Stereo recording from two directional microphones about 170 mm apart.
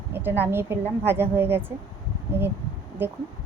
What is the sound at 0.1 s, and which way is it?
A woman's voice, 10° right (ahead or behind).